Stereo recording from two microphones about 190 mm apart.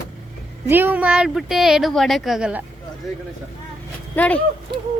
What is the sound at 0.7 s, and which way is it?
Speech, 10° right (ahead or behind).